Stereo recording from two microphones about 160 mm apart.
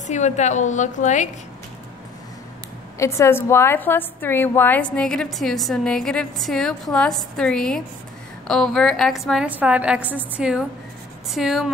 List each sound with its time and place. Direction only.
0.0 s a woman's voice: 45° left (ahead or behind)
3.0 s a woman's voice: 20° left (ahead or behind); by 11.7 s centre (ahead or behind)